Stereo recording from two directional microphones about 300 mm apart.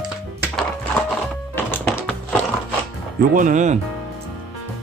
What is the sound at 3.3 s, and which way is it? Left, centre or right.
Speech, right.